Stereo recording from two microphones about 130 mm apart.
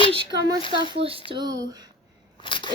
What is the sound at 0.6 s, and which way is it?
Speech, 40° left (ahead or behind).